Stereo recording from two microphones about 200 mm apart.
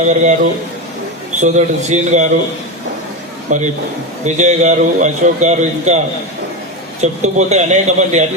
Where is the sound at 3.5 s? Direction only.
35° right (ahead or behind).